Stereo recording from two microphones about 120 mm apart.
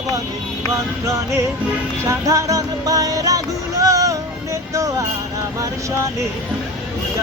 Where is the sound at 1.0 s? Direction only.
25° right (ahead or behind).